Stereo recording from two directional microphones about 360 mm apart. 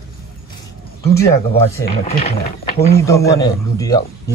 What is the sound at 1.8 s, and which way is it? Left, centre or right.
Speech, left.